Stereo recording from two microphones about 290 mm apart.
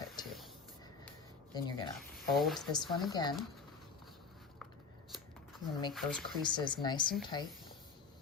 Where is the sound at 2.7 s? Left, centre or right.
Centre.